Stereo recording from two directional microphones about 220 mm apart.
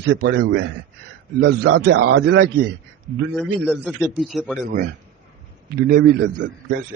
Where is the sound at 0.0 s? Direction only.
55° right (ahead or behind).